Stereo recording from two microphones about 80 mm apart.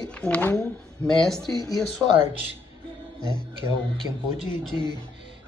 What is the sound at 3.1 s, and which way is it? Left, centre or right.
Speech, left.